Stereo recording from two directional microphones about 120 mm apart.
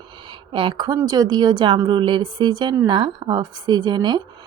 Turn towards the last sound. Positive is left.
turn(degrees=-35)  # may be behind; listen again after turning